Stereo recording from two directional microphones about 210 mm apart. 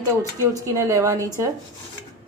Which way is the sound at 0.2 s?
15° right (ahead or behind).